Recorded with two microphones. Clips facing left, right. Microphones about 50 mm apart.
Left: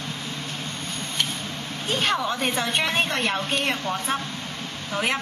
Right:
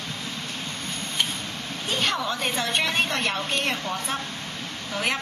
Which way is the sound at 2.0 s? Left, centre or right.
Centre.